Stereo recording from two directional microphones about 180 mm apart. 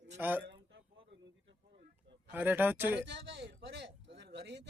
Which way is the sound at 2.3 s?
10° right (ahead or behind).